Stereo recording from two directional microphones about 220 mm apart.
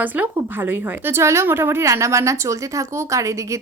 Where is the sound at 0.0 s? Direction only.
10° right (ahead or behind).